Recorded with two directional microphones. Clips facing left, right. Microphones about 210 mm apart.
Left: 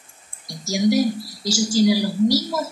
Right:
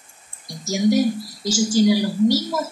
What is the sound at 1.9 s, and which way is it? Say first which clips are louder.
Speech: right 1 dB; 10° left (ahead or behind).